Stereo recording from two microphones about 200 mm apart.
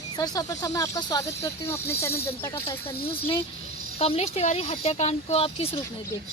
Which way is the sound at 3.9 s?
30° left (ahead or behind).